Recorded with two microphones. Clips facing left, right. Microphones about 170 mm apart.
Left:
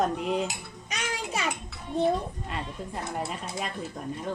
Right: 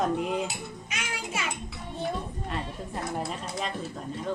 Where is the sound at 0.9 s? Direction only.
40° left (ahead or behind).